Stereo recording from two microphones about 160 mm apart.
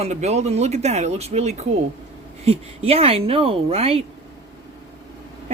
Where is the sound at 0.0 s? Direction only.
45° right (ahead or behind).